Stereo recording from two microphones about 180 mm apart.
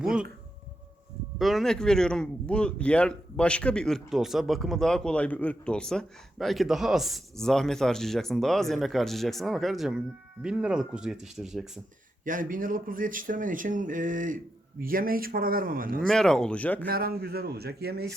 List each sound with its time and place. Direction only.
0.0 s speech: 5° right (ahead or behind)
1.4 s speech: centre (ahead or behind)
12.2 s speech: 50° right (ahead or behind)
16.0 s speech: 5° left (ahead or behind)
16.8 s a man's voice: 55° right (ahead or behind)